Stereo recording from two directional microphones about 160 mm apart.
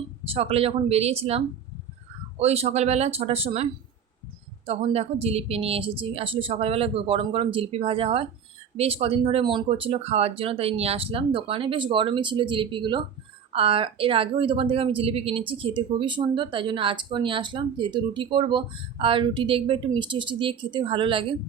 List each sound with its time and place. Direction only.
0.3 s speech: 40° right (ahead or behind)